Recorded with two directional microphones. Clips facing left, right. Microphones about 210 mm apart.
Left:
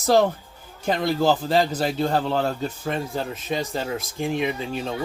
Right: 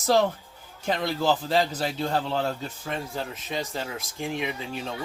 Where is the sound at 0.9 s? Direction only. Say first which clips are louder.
Left 4 dB; 45° left (ahead or behind).